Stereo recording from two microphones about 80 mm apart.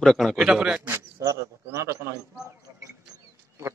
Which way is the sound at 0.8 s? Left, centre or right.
Right.